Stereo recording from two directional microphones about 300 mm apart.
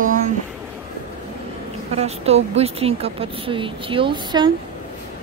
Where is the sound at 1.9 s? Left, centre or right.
Right.